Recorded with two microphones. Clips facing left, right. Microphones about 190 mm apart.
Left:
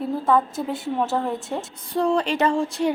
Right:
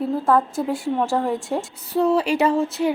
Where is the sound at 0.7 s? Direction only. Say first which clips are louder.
Right 2 dB; centre (ahead or behind).